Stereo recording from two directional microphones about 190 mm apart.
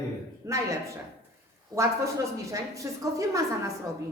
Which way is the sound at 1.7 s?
15° right (ahead or behind).